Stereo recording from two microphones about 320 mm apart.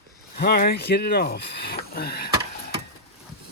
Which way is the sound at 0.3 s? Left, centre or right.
Left.